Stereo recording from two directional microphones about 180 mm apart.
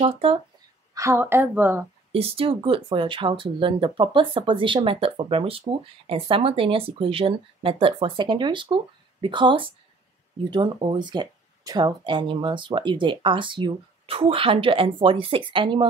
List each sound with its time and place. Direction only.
0.0 s speech: 30° right (ahead or behind)
0.9 s a woman's voice: 15° right (ahead or behind)
2.1 s speech: 30° right (ahead or behind)